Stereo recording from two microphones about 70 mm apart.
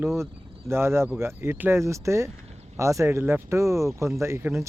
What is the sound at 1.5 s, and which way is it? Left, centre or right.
Speech, right.